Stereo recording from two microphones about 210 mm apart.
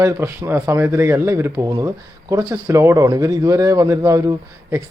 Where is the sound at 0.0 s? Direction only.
10° right (ahead or behind).